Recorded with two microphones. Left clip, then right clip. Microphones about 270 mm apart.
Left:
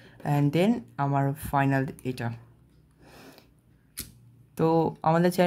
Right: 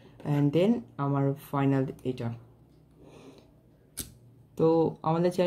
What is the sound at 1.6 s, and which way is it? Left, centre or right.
Speech, left.